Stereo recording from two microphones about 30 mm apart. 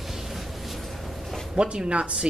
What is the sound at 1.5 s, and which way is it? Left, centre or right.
Speech, right.